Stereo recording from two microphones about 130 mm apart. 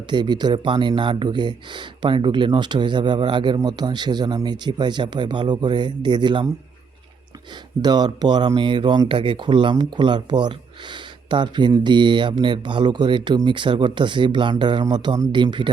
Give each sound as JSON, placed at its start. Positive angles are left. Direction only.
{"t": 0.1, "sound": "speech", "side_deg": -35}
{"t": 7.8, "sound": "speech", "side_deg": -30}